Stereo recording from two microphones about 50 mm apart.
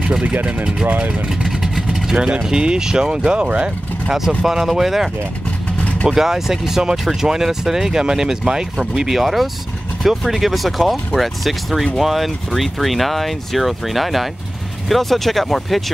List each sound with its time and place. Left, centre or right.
0.2 s speech: right
1.2 s vehicle: centre
2.4 s speech: centre
4.4 s speech: centre
5.8 s vehicle: left
6.0 s speech: centre